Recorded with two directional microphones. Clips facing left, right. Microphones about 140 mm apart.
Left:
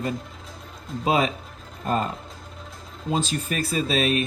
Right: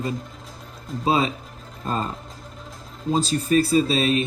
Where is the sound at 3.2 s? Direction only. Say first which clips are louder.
Right 8 dB; 35° right (ahead or behind).